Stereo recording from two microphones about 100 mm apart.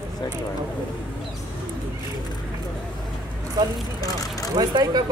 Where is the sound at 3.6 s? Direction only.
35° right (ahead or behind).